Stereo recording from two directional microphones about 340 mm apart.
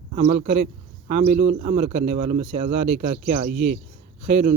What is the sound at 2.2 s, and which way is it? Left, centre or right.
Speech, centre.